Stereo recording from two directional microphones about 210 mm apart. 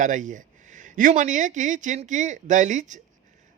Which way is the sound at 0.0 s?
35° right (ahead or behind).